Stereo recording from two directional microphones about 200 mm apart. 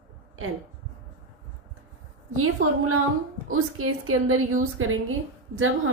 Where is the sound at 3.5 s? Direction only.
90° right.